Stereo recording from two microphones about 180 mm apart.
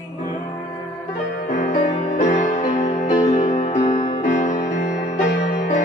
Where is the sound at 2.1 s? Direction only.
45° left (ahead or behind).